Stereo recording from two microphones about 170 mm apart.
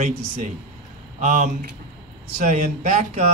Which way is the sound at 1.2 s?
45° right (ahead or behind).